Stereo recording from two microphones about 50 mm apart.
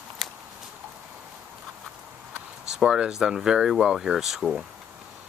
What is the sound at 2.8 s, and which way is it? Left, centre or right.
Speech, centre.